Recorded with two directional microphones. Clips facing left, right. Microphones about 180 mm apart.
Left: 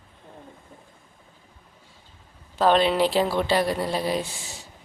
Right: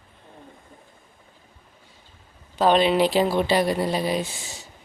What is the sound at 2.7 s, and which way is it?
Speech, 5° right (ahead or behind).